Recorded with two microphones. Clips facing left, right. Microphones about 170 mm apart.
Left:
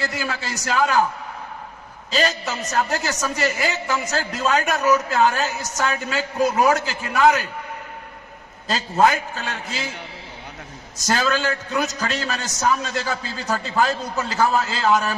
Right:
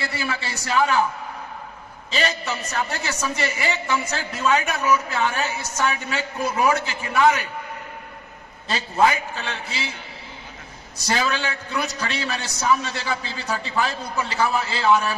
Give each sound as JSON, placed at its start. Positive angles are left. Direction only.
{"t": 0.0, "sound": "a man's voice", "side_deg": 40}
{"t": 2.0, "sound": "a man's voice", "side_deg": 40}
{"t": 8.6, "sound": "a man's voice", "side_deg": 40}
{"t": 11.0, "sound": "a man's voice", "side_deg": 45}